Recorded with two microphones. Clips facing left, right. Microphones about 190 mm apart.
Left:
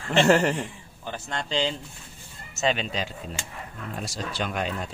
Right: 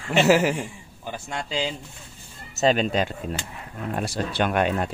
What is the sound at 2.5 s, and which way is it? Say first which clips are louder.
Speech: right 6 dB; 45° right (ahead or behind).